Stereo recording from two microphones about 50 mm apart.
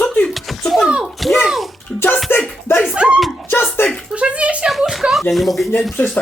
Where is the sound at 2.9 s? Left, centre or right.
Right.